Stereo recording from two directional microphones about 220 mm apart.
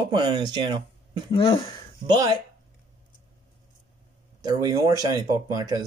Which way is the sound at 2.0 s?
20° right (ahead or behind).